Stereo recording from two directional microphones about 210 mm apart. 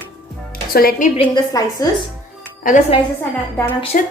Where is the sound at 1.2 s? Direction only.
20° left (ahead or behind).